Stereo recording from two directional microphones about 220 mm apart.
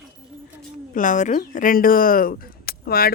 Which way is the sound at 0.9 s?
35° left (ahead or behind).